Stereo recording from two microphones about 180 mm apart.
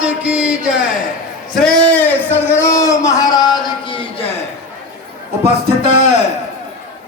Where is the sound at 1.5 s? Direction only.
5° left (ahead or behind); by 4.3 s 30° left (ahead or behind).